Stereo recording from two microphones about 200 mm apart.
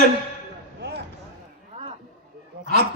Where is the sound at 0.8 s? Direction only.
55° right (ahead or behind).